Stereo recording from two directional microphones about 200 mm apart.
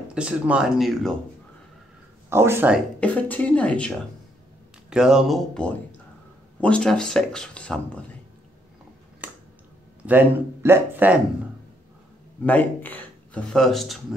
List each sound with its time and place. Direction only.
0.1 s speech: 5° right (ahead or behind)
2.2 s speech: 10° right (ahead or behind)
3.0 s a woman's voice: 5° left (ahead or behind)
10.0 s speech: 10° right (ahead or behind)
12.4 s speech: 10° left (ahead or behind)